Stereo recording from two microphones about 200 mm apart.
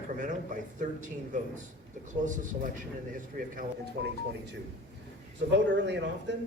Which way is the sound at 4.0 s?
60° right (ahead or behind).